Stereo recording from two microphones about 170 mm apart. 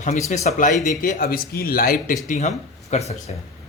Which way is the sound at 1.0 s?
55° left (ahead or behind).